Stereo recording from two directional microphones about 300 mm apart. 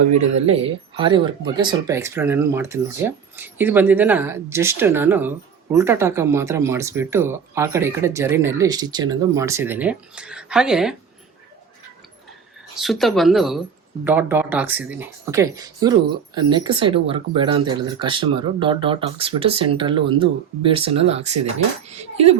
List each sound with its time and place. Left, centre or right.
0.2 s speech: centre
12.8 s speech: centre